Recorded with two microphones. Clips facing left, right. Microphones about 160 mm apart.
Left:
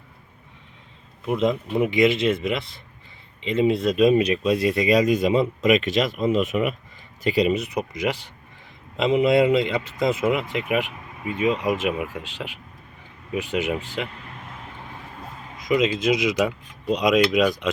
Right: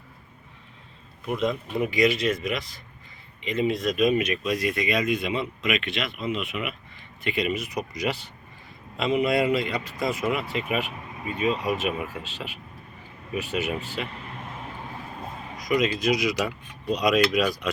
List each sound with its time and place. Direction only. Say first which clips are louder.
1.3 s speech: left 4 dB; 25° left (ahead or behind); by 6.7 s 40° left (ahead or behind)
7.3 s speech: left 6 dB; 30° left (ahead or behind)
8.0 s speech: left 3 dB; 15° left (ahead or behind)
15.7 s speech: left 3 dB; 20° left (ahead or behind)